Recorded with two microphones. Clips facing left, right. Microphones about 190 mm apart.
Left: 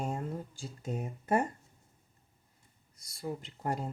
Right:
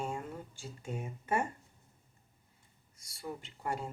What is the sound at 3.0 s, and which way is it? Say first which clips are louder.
Speech: left 4 dB; 35° left (ahead or behind).